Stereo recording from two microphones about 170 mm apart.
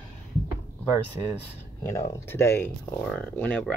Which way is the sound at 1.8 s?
15° left (ahead or behind).